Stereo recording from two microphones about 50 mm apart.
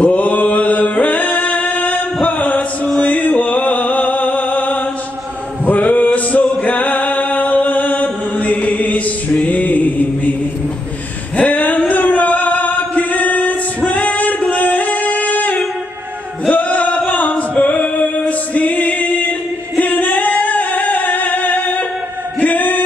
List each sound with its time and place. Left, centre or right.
0.0 s music: left
2.2 s chant: left
3.0 s music: left
6.6 s chant: left
11.3 s a sound: left
11.9 s female singing: left
16.4 s music: left
19.8 s singing: left